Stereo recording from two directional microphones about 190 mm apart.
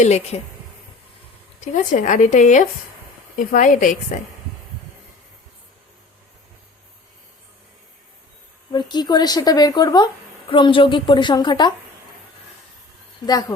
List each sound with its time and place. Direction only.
0.0 s speech: 35° left (ahead or behind)
1.6 s a woman's voice: 40° left (ahead or behind)
8.7 s a woman's voice: 25° left (ahead or behind)